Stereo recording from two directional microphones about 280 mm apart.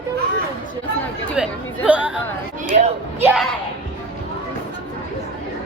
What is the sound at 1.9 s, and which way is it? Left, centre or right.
Speech, centre.